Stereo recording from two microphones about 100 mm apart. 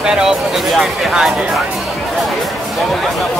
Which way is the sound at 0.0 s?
5° right (ahead or behind).